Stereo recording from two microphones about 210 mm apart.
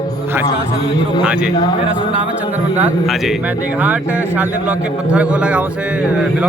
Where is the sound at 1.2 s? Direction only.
5° right (ahead or behind).